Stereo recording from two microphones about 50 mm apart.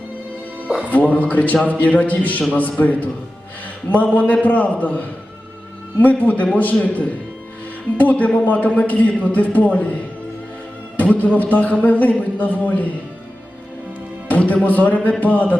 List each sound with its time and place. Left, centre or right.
0.9 s a man's voice: left
14.3 s a man's voice: left